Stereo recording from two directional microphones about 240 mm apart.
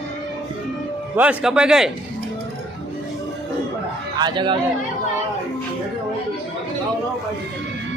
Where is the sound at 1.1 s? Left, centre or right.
Centre.